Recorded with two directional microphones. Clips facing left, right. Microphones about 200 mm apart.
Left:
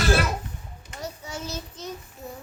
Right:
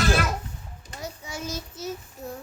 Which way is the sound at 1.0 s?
10° right (ahead or behind).